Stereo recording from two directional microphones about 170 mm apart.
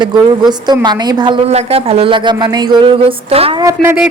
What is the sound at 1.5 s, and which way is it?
Speech, 35° right (ahead or behind).